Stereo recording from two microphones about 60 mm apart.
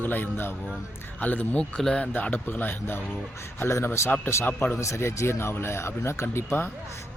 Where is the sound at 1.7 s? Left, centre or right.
Centre.